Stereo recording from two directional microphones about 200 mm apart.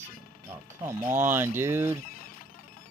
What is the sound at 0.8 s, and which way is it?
Speech, 10° right (ahead or behind).